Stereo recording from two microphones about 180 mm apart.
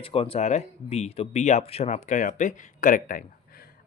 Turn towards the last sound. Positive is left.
turn(degrees=50)  # may be behind; listen again after turning